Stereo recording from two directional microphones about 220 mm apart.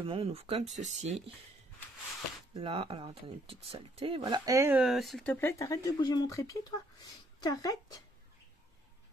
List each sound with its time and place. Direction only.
0.0 s speech: 25° right (ahead or behind)
2.5 s speech: 25° right (ahead or behind); by 8.0 s 15° left (ahead or behind)